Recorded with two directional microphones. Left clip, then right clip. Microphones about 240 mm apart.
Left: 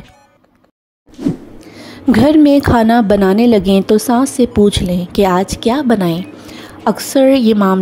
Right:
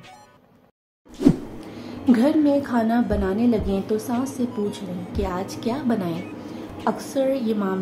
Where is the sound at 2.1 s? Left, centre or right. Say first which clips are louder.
Left 10 dB; left.